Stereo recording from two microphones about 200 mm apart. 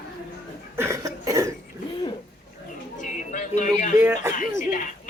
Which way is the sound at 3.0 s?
40° left (ahead or behind).